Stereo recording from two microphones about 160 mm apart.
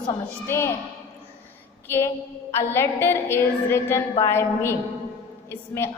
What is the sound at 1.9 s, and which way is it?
A man's voice, 15° left (ahead or behind).